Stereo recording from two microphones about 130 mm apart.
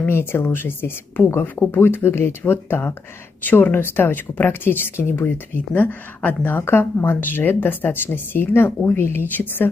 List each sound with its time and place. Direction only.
0.0 s a woman's voice: 15° left (ahead or behind)